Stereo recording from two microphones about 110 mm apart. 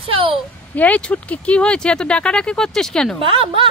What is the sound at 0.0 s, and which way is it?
Speech, 55° right (ahead or behind).